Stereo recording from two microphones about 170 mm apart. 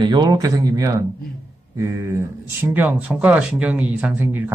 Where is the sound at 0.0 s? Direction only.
25° right (ahead or behind).